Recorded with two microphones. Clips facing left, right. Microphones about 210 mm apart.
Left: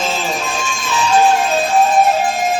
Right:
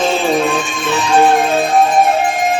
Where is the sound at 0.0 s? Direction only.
60° right (ahead or behind).